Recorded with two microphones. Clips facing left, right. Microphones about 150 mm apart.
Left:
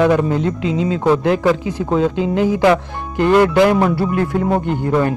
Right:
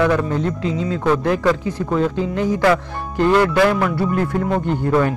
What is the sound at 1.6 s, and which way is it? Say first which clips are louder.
Speech: left 2 dB; 90° left.